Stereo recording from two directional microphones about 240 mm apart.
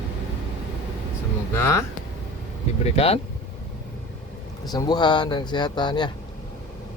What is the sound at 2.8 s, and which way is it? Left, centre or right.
Speech, left.